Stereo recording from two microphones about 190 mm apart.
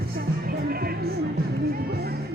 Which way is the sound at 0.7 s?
55° right (ahead or behind).